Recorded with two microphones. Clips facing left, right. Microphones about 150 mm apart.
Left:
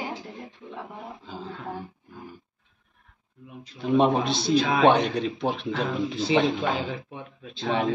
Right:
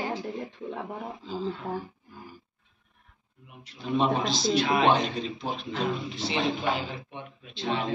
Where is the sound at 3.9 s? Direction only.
60° left (ahead or behind); by 5.8 s 75° left (ahead or behind).